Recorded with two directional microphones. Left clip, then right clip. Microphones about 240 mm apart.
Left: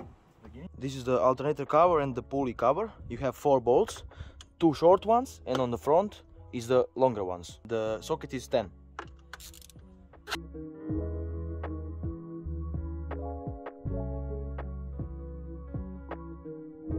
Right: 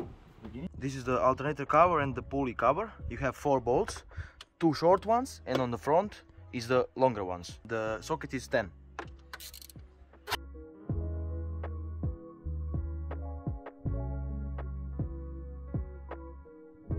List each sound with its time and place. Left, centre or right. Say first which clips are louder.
0.7 s speech: left 3 dB; left
3.6 s speech: left 4 dB; left
4.2 s speech: left 3 dB; left
5.4 s speech: left 2 dB; left
7.6 s speech: left 3 dB; left
10.9 s music: left 6 dB; centre